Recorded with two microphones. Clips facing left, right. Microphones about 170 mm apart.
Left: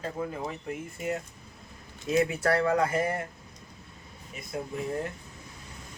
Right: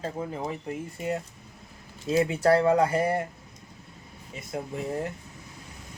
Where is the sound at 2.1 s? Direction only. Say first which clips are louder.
Right 3 dB; 30° right (ahead or behind).